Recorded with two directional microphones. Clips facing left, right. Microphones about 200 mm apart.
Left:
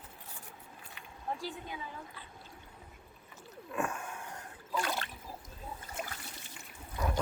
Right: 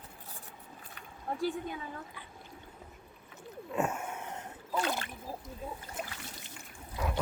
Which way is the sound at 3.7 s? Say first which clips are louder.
Right 3 dB; 25° right (ahead or behind).